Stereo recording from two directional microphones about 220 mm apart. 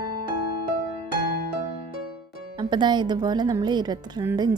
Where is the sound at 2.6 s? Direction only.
20° right (ahead or behind).